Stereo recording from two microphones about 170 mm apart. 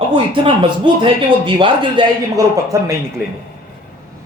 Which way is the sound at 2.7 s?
15° right (ahead or behind).